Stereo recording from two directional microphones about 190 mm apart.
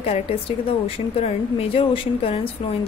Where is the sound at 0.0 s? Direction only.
30° left (ahead or behind).